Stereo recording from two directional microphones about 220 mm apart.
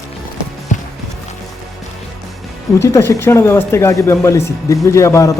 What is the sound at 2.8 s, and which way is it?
Speech, 15° left (ahead or behind).